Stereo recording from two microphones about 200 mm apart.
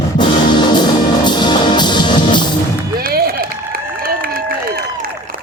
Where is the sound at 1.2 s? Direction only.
20° left (ahead or behind).